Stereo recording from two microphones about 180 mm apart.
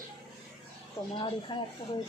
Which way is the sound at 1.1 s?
25° left (ahead or behind).